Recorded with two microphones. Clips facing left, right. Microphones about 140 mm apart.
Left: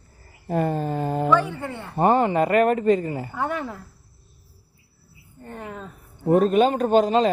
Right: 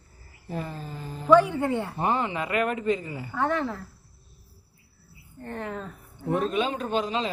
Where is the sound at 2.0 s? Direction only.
50° left (ahead or behind).